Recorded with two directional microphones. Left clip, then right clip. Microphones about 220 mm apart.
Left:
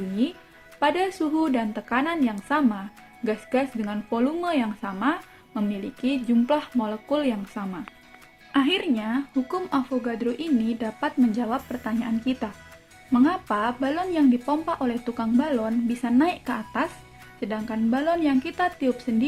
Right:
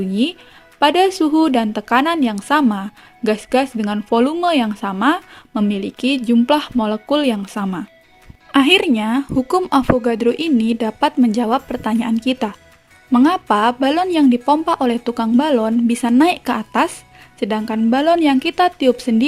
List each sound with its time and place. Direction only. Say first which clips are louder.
0.8 s speech: right 10 dB; 45° right (ahead or behind)